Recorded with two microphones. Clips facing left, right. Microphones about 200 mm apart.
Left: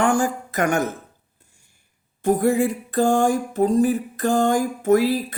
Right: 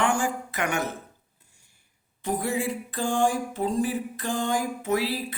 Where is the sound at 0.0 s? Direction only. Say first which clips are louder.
Left 5 dB; 45° left (ahead or behind).